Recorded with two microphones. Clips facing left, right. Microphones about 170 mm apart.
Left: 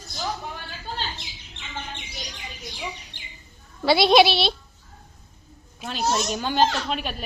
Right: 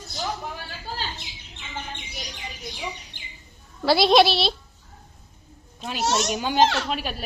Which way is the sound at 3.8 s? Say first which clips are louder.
Left 1 dB; centre (ahead or behind).